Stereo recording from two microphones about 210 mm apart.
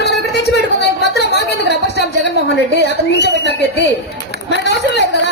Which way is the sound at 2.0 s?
55° left (ahead or behind).